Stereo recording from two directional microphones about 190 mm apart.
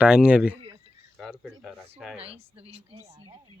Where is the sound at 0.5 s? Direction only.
30° right (ahead or behind).